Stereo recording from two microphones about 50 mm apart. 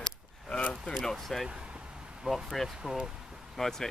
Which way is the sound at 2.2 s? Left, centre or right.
Centre.